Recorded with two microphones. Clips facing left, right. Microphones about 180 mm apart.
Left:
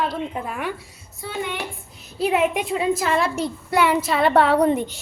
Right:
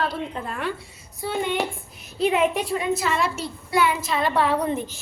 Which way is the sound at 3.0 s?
50° left (ahead or behind).